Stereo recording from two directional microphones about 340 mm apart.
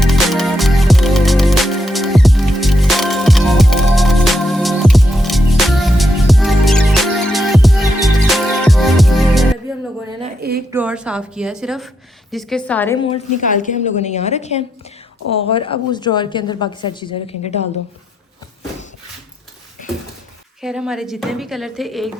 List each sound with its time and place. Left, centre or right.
0.0 s music: centre
10.7 s a woman's voice: centre
20.6 s a woman's voice: centre